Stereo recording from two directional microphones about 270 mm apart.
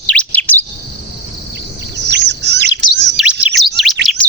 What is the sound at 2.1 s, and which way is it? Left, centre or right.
Bird, right.